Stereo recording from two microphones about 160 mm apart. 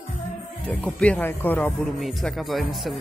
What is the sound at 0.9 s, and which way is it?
Speech, 10° left (ahead or behind).